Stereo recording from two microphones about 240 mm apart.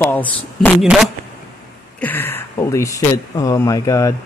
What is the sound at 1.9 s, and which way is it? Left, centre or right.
Speech, centre.